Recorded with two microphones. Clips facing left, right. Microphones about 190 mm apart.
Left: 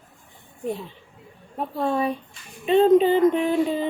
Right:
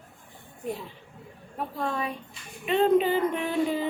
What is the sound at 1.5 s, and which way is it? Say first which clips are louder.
A woman's voice: left 6 dB; 30° left (ahead or behind).